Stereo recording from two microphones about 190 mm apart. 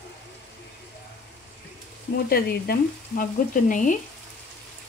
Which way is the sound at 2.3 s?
55° left (ahead or behind).